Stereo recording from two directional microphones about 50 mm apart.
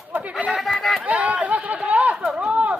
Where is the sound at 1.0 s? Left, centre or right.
Right.